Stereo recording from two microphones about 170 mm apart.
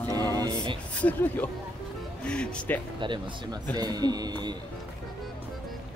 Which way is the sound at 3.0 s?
30° right (ahead or behind).